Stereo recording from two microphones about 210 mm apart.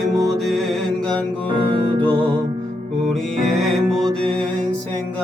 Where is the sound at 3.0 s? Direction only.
Centre (ahead or behind).